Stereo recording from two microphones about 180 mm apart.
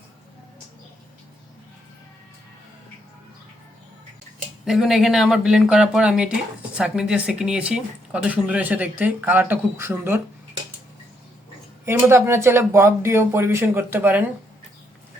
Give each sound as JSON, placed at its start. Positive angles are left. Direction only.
{"t": 4.6, "sound": "speech", "side_deg": 0}
{"t": 11.9, "sound": "speech", "side_deg": -15}